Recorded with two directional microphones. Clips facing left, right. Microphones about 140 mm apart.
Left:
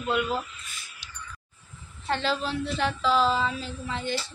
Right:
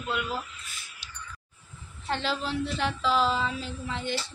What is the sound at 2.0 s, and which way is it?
Speech, 10° right (ahead or behind).